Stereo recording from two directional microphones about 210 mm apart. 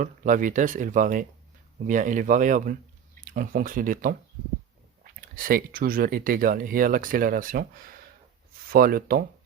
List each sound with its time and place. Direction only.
0.0 s speech: 40° right (ahead or behind)
5.4 s speech: 45° right (ahead or behind)